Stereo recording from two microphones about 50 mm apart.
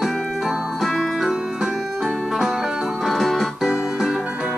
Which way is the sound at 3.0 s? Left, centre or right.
Centre.